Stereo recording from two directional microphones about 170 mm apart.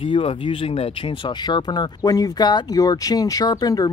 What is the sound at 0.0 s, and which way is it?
Speech, 35° left (ahead or behind).